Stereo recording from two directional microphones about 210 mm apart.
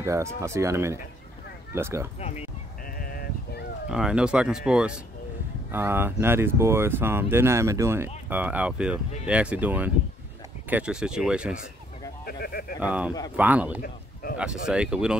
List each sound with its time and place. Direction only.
0.0 s speech: 15° right (ahead or behind)
2.1 s speech: 30° left (ahead or behind)
3.0 s sheep: 45° left (ahead or behind)
3.9 s speech: 5° right (ahead or behind)
12.3 s speech: 45° left (ahead or behind)
12.8 s speech: 5° right (ahead or behind)